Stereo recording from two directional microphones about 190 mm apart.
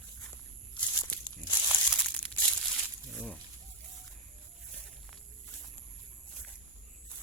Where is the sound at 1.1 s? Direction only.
15° left (ahead or behind).